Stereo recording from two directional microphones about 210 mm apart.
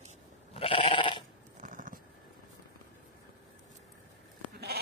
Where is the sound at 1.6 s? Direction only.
40° right (ahead or behind).